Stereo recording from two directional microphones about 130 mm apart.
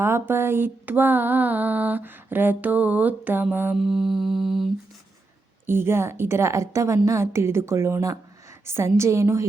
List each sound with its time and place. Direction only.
0.0 s mantra: 20° right (ahead or behind)
3.8 s mantra: centre (ahead or behind)
5.6 s a woman's voice: 20° right (ahead or behind)